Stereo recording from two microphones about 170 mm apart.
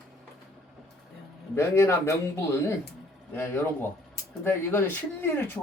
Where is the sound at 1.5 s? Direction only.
15° left (ahead or behind).